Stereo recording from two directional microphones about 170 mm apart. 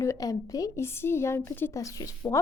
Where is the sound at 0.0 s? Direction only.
20° left (ahead or behind).